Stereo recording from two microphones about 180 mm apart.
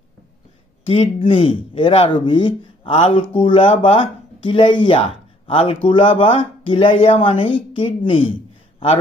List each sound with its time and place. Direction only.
0.8 s speech: 30° left (ahead or behind)